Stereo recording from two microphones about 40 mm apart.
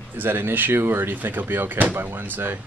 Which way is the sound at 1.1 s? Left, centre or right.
Right.